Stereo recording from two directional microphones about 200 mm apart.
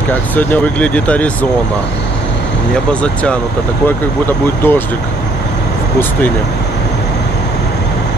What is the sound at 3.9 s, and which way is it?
Speech, 10° left (ahead or behind).